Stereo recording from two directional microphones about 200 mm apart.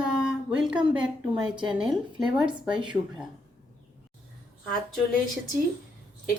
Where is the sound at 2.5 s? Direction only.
25° right (ahead or behind).